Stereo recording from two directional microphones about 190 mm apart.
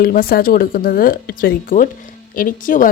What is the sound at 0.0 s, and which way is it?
A woman's voice, 50° left (ahead or behind).